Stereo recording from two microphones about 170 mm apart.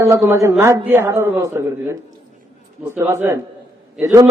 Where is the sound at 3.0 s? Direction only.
15° right (ahead or behind).